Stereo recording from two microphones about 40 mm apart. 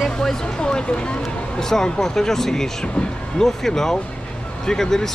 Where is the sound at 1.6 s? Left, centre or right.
Centre.